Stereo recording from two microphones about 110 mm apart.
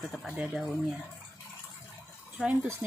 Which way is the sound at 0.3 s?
10° right (ahead or behind).